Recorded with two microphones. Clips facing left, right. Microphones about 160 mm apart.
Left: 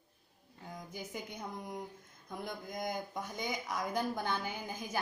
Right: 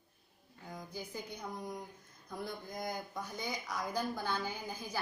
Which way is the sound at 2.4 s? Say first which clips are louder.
Left 2 dB; 20° left (ahead or behind).